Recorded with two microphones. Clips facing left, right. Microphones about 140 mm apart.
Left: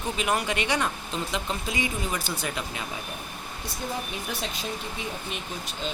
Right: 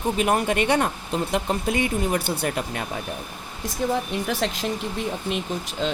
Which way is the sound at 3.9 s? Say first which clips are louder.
Right 7 dB; 75° right (ahead or behind).